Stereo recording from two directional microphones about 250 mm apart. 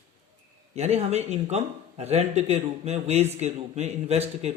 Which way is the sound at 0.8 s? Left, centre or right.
Right.